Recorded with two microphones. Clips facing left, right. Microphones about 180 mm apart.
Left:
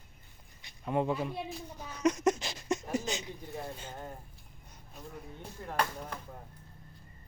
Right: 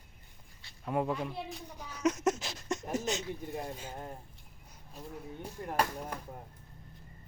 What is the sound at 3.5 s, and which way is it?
Speech, 10° right (ahead or behind).